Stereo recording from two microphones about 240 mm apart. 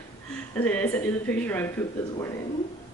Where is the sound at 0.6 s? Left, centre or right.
Centre.